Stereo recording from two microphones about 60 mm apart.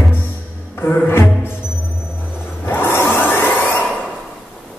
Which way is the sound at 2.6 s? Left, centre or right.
Left.